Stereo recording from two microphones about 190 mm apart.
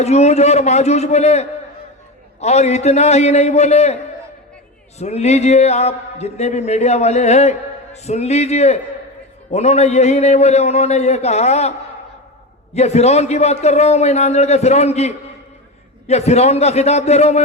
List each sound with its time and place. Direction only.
0.0 s speech: 35° left (ahead or behind)
4.9 s speech: 35° left (ahead or behind)
12.7 s speech: 35° left (ahead or behind)